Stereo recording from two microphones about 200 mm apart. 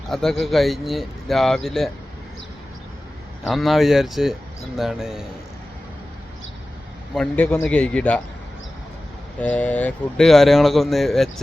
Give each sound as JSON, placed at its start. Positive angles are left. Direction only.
{"t": 0.1, "sound": "speech", "side_deg": 0}
{"t": 3.4, "sound": "speech", "side_deg": 0}
{"t": 7.1, "sound": "speech", "side_deg": 5}
{"t": 9.4, "sound": "speech", "side_deg": 5}